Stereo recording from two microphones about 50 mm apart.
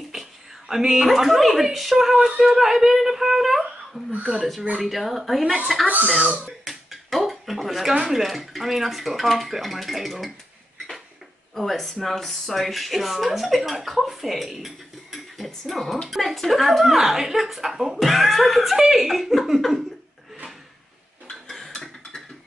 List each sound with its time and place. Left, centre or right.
0.1 s speech: centre
6.0 s speech: right
6.6 s finger snapping: centre
7.9 s speech: centre
11.5 s speech: centre
21.3 s a sound: centre